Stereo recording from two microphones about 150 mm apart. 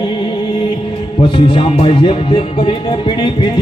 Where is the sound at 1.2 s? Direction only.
35° left (ahead or behind).